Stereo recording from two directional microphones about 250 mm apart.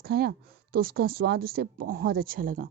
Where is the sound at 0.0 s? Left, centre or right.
Right.